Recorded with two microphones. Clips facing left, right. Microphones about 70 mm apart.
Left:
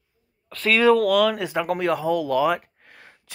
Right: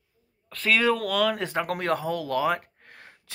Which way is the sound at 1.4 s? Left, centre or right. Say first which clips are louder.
Left 4 dB; right.